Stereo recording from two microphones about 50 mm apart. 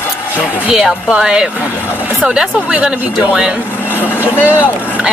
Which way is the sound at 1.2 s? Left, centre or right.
Right.